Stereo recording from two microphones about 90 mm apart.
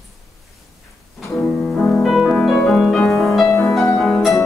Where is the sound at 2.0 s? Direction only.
5° right (ahead or behind).